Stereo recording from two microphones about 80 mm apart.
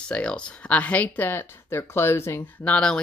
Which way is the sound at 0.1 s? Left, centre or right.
Centre.